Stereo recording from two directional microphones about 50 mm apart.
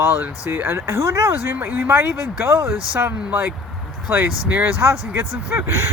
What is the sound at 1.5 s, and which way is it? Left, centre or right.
Speech, right.